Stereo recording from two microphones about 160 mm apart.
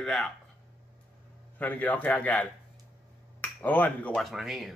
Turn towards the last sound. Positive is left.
turn(degrees=0)  # may be behind; listen again after turning